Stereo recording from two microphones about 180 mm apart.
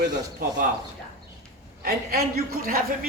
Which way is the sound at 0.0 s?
70° right (ahead or behind).